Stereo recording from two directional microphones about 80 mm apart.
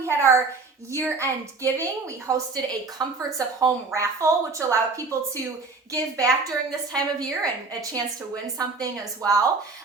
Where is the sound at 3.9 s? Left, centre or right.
Right.